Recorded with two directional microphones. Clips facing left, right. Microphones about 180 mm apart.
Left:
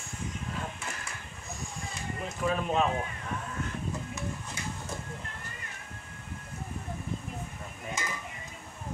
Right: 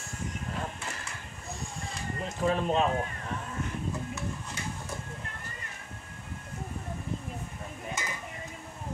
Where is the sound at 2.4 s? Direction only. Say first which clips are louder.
Right 2 dB; 30° right (ahead or behind).